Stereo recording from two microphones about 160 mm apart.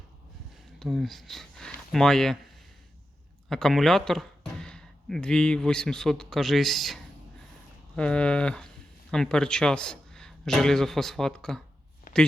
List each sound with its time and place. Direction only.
0.8 s speech: centre (ahead or behind)
3.5 s speech: centre (ahead or behind)
12.1 s a sound: 55° left (ahead or behind)